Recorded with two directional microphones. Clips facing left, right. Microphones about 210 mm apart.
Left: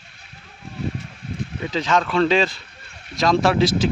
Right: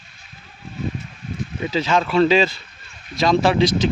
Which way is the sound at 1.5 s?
10° right (ahead or behind).